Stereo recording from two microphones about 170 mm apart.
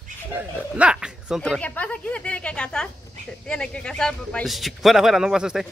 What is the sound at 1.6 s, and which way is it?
Speech, 10° left (ahead or behind).